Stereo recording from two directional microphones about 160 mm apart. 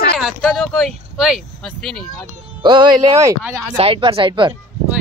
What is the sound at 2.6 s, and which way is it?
Speech, 30° right (ahead or behind).